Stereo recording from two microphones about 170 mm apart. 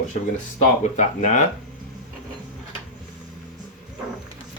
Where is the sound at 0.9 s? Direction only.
45° left (ahead or behind).